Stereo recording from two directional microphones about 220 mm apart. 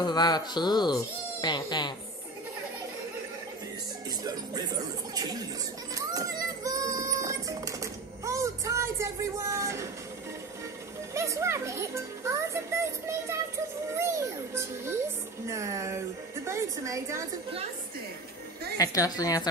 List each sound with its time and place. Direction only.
0.0 s speech: 20° left (ahead or behind)
4.2 s speech: 15° right (ahead or behind)
5.9 s a sound: 15° right (ahead or behind)
11.1 s a child's voice: 15° right (ahead or behind)
18.8 s a woman's voice: 15° left (ahead or behind)